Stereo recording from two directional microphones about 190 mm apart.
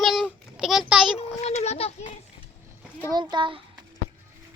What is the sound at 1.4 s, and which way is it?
Speech, 35° left (ahead or behind).